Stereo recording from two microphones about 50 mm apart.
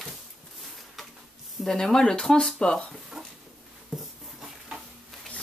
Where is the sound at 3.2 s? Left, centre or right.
Centre.